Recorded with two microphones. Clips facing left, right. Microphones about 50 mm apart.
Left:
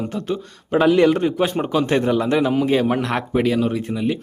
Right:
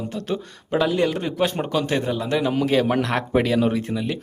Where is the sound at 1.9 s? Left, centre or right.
Left.